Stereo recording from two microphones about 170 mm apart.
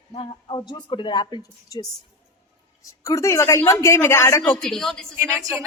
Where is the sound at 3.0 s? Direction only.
20° left (ahead or behind).